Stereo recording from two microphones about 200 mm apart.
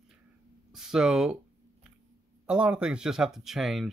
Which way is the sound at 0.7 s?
Centre (ahead or behind).